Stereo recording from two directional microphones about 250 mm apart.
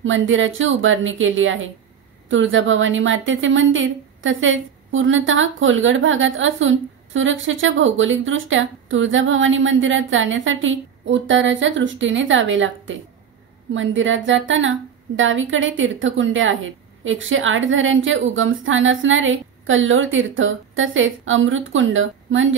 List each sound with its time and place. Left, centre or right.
0.0 s a woman's voice: right